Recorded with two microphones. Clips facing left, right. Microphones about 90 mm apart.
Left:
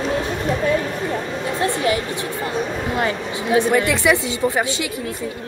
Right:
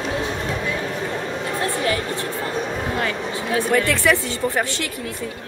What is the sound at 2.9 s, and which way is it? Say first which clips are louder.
A woman's voice: left 2 dB; 20° left (ahead or behind).